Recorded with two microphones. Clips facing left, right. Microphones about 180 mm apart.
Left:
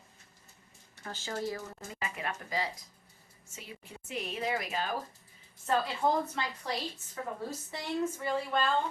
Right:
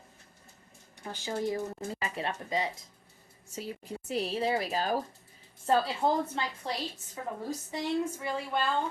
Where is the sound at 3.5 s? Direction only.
40° right (ahead or behind).